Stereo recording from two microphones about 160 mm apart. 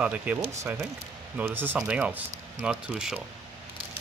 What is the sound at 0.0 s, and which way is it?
Speech, 10° right (ahead or behind).